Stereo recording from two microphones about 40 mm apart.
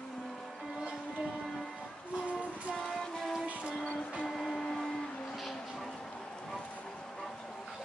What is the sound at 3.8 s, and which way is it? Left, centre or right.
Music, left.